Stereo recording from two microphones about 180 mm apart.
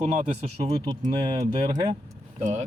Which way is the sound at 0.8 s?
20° right (ahead or behind).